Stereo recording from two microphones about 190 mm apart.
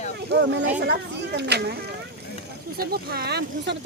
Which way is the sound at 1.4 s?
60° right (ahead or behind).